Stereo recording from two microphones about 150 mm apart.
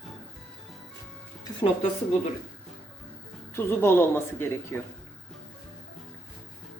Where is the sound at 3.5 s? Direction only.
15° left (ahead or behind).